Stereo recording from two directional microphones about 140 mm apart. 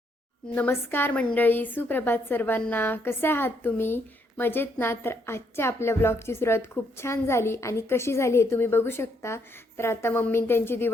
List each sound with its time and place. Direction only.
0.5 s a woman's voice: 15° left (ahead or behind)